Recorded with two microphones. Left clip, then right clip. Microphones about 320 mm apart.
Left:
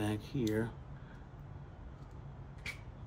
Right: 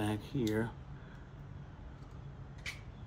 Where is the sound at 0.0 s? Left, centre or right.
Centre.